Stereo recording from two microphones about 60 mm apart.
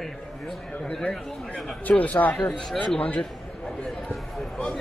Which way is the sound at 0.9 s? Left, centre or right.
Centre.